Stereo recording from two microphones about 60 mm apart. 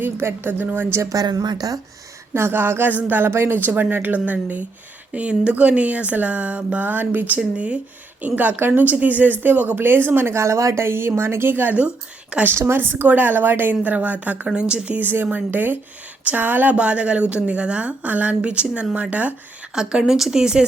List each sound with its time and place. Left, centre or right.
0.0 s speech: right
1.1 s speech: right
2.3 s a woman's voice: right
7.3 s a woman's voice: right
10.8 s speech: right
12.5 s speech: right
14.4 s speech: centre
15.4 s a woman's voice: right
19.7 s speech: centre